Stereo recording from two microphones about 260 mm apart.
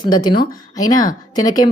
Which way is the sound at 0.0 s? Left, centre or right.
Centre.